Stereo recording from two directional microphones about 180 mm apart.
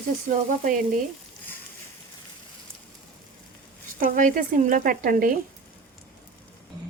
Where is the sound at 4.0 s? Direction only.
50° right (ahead or behind).